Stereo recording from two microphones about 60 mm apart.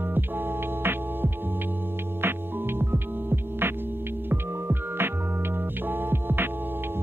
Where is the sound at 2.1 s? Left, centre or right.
Right.